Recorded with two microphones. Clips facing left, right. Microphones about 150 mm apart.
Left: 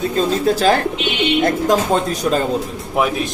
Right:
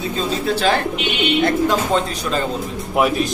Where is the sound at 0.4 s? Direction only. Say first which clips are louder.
Left 2 dB; 40° left (ahead or behind).